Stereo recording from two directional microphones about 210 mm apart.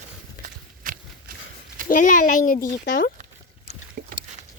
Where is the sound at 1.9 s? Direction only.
40° left (ahead or behind).